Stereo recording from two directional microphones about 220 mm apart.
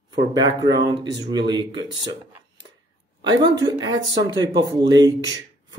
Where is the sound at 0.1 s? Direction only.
20° right (ahead or behind).